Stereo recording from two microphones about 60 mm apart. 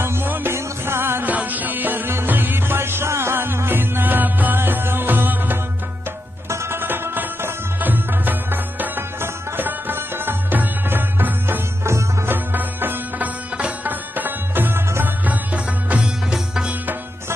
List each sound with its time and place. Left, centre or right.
0.0 s music: right
1.2 s music: right
6.5 s music: right
6.8 s music: right
15.2 s music: right